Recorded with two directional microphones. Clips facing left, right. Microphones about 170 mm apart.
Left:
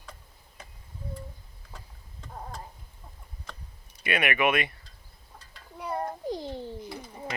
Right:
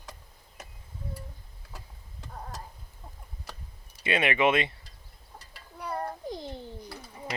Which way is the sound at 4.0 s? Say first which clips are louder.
Right 1 dB; 25° right (ahead or behind).